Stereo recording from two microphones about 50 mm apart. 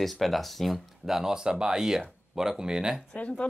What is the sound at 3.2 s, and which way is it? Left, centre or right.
Speech, left.